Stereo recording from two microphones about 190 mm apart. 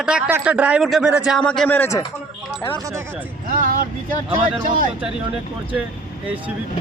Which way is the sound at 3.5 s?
45° right (ahead or behind).